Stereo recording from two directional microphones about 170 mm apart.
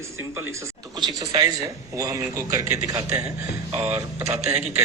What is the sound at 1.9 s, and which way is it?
Speech, 20° right (ahead or behind).